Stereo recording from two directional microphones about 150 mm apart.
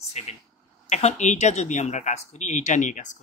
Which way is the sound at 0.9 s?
50° left (ahead or behind).